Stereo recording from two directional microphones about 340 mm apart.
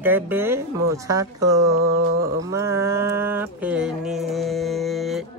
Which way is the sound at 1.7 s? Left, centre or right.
Right.